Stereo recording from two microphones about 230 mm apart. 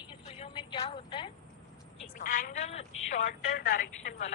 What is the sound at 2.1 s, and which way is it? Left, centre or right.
A woman's voice, left.